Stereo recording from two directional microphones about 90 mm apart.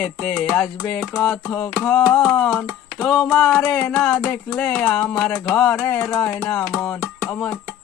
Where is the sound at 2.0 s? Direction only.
Centre (ahead or behind).